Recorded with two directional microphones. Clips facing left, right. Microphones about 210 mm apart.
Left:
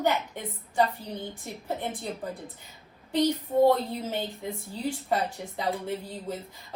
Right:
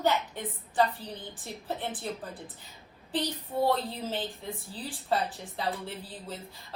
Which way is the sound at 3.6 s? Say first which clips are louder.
Left 5 dB; 15° left (ahead or behind).